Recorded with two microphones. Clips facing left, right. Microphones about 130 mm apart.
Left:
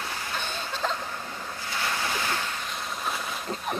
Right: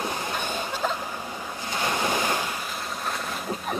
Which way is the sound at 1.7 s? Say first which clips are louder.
Right 5 dB; 20° right (ahead or behind).